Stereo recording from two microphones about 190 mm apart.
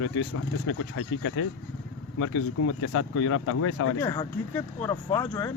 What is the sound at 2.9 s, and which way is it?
Speech, 90° left.